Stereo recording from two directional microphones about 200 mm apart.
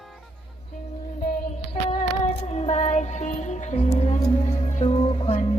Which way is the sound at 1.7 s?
30° left (ahead or behind).